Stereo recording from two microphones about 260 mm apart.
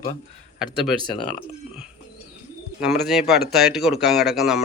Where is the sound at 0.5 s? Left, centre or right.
Centre.